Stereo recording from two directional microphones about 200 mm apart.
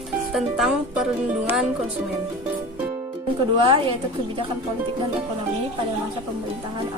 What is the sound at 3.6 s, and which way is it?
Speech, 25° right (ahead or behind).